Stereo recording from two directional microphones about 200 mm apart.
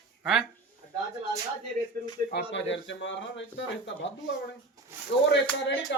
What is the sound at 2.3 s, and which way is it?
Speech, 65° left (ahead or behind).